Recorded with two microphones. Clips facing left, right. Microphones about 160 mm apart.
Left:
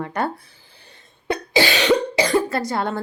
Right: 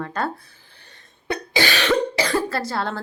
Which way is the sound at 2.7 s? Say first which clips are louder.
Left 3 dB; 15° left (ahead or behind).